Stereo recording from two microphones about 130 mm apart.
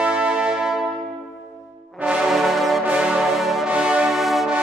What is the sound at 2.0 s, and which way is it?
Music, 5° right (ahead or behind).